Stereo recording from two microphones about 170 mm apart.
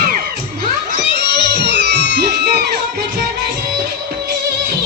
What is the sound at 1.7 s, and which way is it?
Music, 80° right.